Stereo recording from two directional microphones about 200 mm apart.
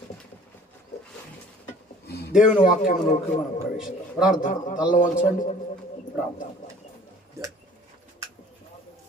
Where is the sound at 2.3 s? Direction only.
5° right (ahead or behind).